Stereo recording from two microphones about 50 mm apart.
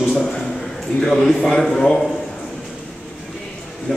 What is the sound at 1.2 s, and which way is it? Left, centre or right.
Speech, centre.